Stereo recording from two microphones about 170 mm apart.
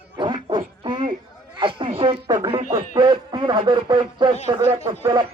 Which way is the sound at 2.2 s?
15° right (ahead or behind).